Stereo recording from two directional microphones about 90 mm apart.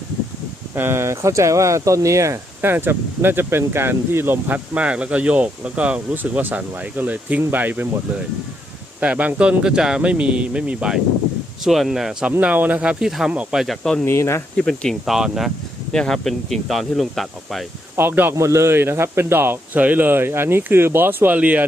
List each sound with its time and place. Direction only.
0.8 s speech: 30° right (ahead or behind)
2.6 s a man's voice: 25° right (ahead or behind)
9.0 s speech: 15° right (ahead or behind)
12.4 s speech: 15° right (ahead or behind)
13.1 s speech: 5° right (ahead or behind)
14.0 s speech: 30° left (ahead or behind)
14.5 s speech: 10° left (ahead or behind)
15.0 s speech: 5° right (ahead or behind)
17.9 s speech: 20° right (ahead or behind)
18.3 s a man's voice: 30° right (ahead or behind); by 21.6 s 15° right (ahead or behind)